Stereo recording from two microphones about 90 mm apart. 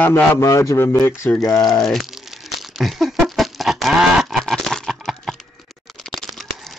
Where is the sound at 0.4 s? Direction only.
35° left (ahead or behind).